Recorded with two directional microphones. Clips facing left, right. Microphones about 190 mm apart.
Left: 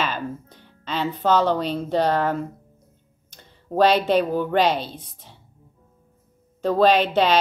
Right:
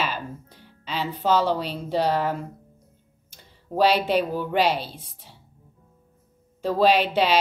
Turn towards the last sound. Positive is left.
turn(degrees=-10)  # may be behind; listen again after turning